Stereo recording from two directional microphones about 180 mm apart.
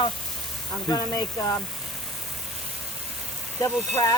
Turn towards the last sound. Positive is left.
turn(degrees=20)  # may be behind; listen again after turning